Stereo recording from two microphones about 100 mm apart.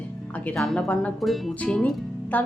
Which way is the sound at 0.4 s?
5° left (ahead or behind).